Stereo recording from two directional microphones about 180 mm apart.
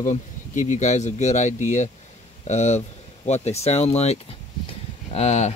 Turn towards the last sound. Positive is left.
turn(degrees=35)  # may be behind; listen again after turning